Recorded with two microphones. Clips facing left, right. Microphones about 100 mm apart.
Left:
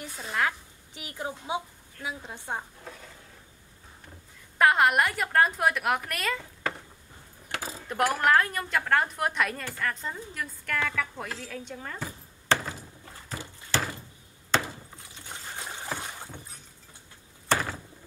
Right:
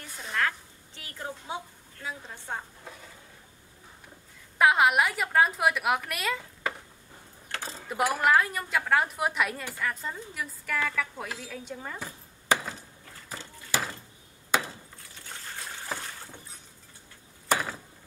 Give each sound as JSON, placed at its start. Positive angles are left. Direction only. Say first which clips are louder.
{"t": 0.0, "sound": "a sound", "louder": "left 2 dB", "side_deg": 5}
{"t": 0.4, "sound": "a woman's voice", "louder": "left 1 dB", "side_deg": 15}
{"t": 4.6, "sound": "a woman's voice", "louder": "even", "side_deg": 0}
{"t": 7.5, "sound": "a sound", "louder": "left 2 dB", "side_deg": 10}
{"t": 7.9, "sound": "a woman's voice", "louder": "even", "side_deg": -5}
{"t": 13.7, "sound": "a sound", "louder": "left 1 dB", "side_deg": -10}
{"t": 14.5, "sound": "wood", "louder": "left 1 dB", "side_deg": -10}
{"t": 15.0, "sound": "trickle", "louder": "left 2 dB", "side_deg": 20}
{"t": 16.0, "sound": "rowboat", "louder": "left 2 dB", "side_deg": 20}
{"t": 17.5, "sound": "door", "louder": "even", "side_deg": -5}